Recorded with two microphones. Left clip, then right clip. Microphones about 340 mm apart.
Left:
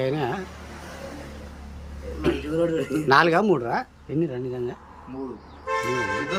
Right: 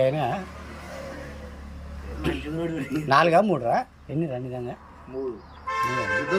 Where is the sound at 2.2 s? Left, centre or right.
Centre.